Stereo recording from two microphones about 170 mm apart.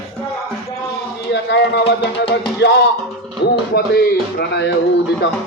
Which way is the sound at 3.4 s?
80° left.